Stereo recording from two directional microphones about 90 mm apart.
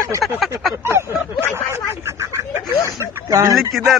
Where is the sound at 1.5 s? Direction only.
30° right (ahead or behind).